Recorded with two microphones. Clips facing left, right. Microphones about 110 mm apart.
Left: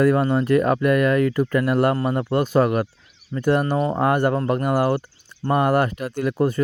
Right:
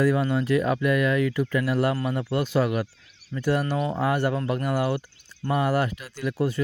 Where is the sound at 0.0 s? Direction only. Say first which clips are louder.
Left 4 dB; 50° left (ahead or behind).